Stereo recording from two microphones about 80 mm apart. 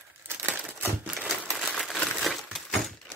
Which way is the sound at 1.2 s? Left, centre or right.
Centre.